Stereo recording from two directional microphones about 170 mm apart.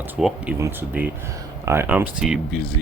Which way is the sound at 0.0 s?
5° right (ahead or behind).